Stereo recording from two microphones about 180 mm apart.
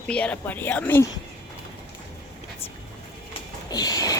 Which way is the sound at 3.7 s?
20° left (ahead or behind).